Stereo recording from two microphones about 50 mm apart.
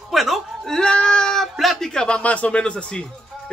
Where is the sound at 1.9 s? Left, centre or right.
Centre.